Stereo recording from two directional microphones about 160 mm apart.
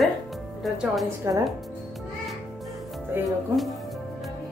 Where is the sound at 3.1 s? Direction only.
15° right (ahead or behind).